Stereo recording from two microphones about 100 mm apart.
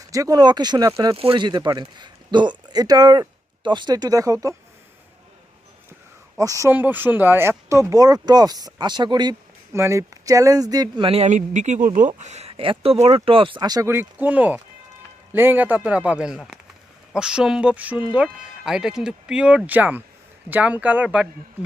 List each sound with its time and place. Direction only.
0.1 s speech: 35° right (ahead or behind)
1.1 s speech: 70° right (ahead or behind)
1.4 s speech: 45° right (ahead or behind)
6.4 s speech: 35° right (ahead or behind)
6.7 s speech: 20° right (ahead or behind); by 9.3 s 45° right (ahead or behind)
9.7 s speech: 25° right (ahead or behind)
11.0 s speech: 80° right
12.4 s speech: 75° right (ahead or behind)
13.6 s speech: 40° right (ahead or behind)
13.8 s speech: 20° right (ahead or behind)